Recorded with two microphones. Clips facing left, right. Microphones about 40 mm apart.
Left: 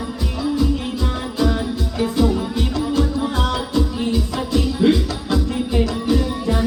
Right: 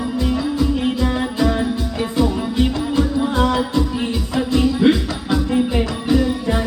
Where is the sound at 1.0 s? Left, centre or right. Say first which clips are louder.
Right 3 dB; right.